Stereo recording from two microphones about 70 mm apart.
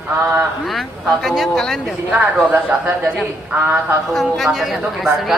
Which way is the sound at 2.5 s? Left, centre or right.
Centre.